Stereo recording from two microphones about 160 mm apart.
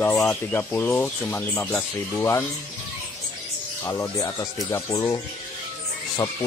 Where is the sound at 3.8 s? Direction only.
15° left (ahead or behind).